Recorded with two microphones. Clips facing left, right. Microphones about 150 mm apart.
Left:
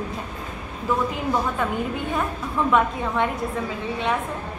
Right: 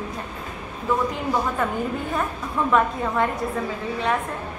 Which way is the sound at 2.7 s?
Centre (ahead or behind).